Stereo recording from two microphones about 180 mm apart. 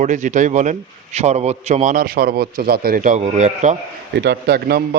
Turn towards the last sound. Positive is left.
turn(degrees=-60)  # may be behind; listen again after turning